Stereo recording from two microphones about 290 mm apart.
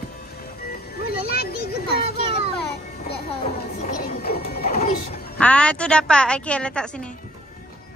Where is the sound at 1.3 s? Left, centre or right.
Left.